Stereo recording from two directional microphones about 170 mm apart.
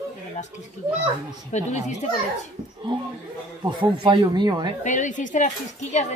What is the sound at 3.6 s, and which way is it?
Speech, 25° right (ahead or behind).